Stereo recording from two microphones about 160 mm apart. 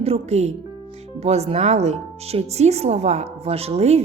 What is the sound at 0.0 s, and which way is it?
Speech, 40° right (ahead or behind).